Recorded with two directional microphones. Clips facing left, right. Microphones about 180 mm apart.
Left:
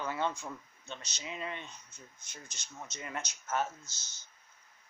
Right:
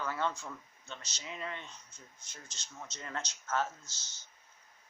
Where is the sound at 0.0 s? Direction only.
20° left (ahead or behind).